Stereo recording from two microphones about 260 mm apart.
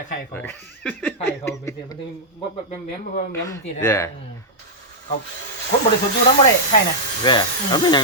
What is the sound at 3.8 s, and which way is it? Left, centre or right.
Speech, centre.